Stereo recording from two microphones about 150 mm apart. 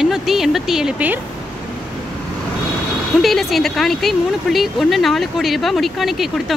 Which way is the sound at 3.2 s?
Centre (ahead or behind).